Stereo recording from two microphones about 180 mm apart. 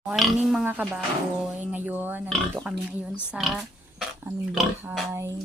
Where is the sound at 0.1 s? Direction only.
5° right (ahead or behind).